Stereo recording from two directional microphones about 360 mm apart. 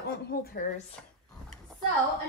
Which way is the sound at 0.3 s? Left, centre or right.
Left.